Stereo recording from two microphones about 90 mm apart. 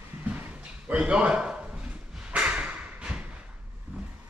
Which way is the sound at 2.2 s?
10° right (ahead or behind).